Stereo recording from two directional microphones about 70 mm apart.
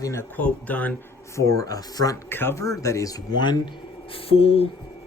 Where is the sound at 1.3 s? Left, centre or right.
Left.